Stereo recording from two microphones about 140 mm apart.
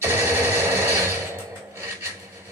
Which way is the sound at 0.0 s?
15° right (ahead or behind).